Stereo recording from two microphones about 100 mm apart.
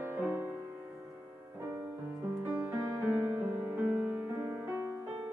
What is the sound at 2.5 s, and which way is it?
Music, 20° right (ahead or behind).